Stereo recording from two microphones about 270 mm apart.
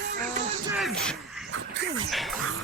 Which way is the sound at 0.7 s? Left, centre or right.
Centre.